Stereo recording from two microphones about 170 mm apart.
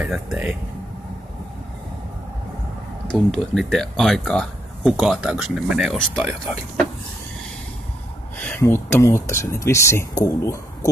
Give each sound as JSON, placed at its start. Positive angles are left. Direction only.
{"t": 0.0, "sound": "speech", "side_deg": -5}
{"t": 3.1, "sound": "speech", "side_deg": 0}
{"t": 8.4, "sound": "speech", "side_deg": 10}